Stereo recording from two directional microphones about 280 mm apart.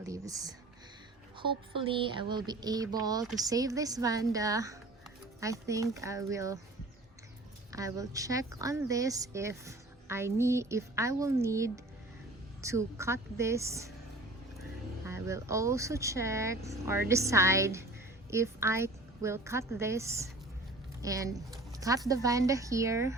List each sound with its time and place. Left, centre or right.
0.0 s speech: centre
7.7 s speech: centre
15.0 s speech: centre